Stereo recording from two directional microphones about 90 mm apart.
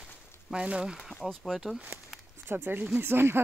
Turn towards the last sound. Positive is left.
turn(degrees=-25)  # may be behind; listen again after turning